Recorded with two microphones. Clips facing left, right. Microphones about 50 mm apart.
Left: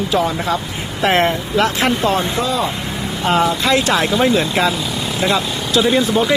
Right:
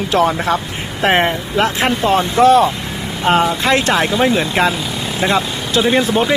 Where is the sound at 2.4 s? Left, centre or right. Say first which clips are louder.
Right 10 dB; right.